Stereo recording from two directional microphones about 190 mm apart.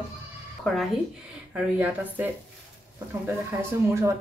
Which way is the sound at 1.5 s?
10° right (ahead or behind).